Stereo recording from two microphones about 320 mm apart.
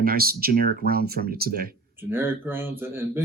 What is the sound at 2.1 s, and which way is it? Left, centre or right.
Speech, centre.